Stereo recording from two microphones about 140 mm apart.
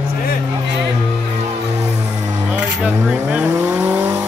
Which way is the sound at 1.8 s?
55° right (ahead or behind).